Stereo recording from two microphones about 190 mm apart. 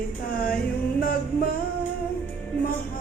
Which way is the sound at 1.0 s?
50° left (ahead or behind).